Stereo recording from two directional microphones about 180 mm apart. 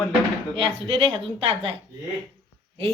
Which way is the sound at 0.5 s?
30° right (ahead or behind).